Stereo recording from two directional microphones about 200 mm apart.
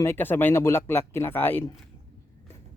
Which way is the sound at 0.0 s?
10° left (ahead or behind).